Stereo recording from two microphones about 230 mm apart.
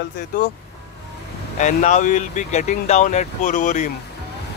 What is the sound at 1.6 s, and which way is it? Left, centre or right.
Speech, left.